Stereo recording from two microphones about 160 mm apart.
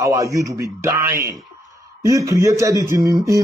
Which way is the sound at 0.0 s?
20° right (ahead or behind).